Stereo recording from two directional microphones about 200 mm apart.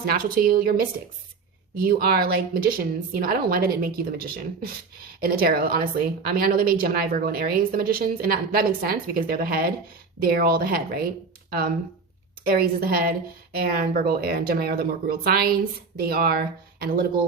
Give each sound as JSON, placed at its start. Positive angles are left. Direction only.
{"t": 0.0, "sound": "a woman's voice", "side_deg": -45}
{"t": 1.8, "sound": "a woman's voice", "side_deg": -50}
{"t": 12.5, "sound": "a woman's voice", "side_deg": -50}